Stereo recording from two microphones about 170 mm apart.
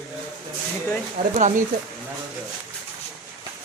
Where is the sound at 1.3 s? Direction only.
45° right (ahead or behind).